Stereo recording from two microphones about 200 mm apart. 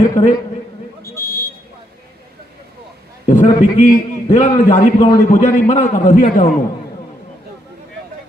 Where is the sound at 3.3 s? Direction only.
40° left (ahead or behind).